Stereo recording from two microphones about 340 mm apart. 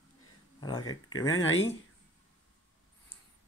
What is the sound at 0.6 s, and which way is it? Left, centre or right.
Speech, centre.